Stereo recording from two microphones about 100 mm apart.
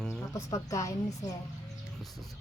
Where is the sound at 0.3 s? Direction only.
30° left (ahead or behind).